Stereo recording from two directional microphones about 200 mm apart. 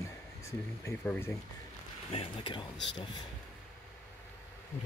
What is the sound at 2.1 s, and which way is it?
Speech, 25° left (ahead or behind).